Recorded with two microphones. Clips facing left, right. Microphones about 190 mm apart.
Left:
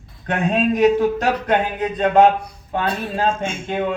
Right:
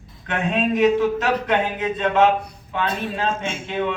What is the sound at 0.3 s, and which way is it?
Speech, 40° left (ahead or behind).